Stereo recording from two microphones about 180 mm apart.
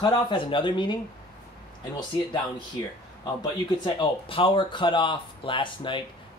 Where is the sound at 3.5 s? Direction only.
25° left (ahead or behind).